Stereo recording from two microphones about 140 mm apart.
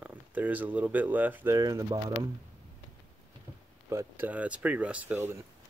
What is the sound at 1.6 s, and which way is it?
Speech, 25° right (ahead or behind).